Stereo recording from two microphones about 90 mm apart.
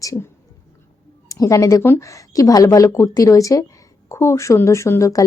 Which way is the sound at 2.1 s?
40° left (ahead or behind).